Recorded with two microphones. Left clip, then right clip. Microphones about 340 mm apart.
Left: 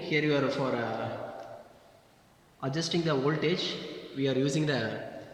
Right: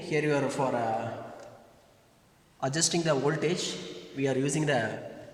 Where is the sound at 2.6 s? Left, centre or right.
Right.